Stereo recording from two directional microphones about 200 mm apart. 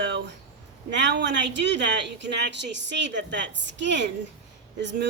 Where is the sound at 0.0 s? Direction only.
60° right (ahead or behind).